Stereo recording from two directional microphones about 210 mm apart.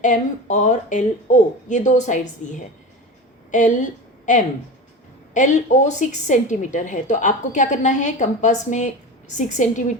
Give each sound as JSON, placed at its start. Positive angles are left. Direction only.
{"t": 0.0, "sound": "a woman's voice", "side_deg": 35}
{"t": 3.5, "sound": "a woman's voice", "side_deg": 35}
{"t": 5.3, "sound": "a woman's voice", "side_deg": 35}